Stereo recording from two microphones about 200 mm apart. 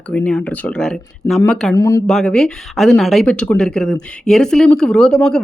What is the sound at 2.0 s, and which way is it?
Speech, 5° left (ahead or behind).